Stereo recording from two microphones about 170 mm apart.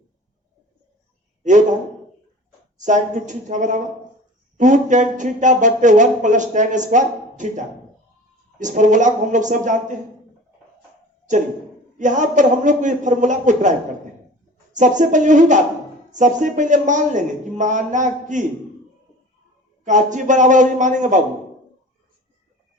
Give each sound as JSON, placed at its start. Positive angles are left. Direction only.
{"t": 2.7, "sound": "speech", "side_deg": -45}
{"t": 11.9, "sound": "speech", "side_deg": -45}
{"t": 19.8, "sound": "speech", "side_deg": -45}